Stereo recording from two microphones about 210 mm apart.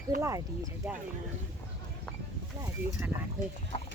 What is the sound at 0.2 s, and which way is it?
Speech, 15° right (ahead or behind).